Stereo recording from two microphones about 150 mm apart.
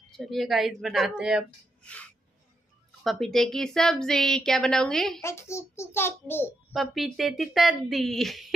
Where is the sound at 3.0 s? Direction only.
Centre (ahead or behind).